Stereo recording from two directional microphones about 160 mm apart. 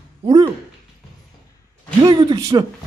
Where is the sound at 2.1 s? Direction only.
25° right (ahead or behind).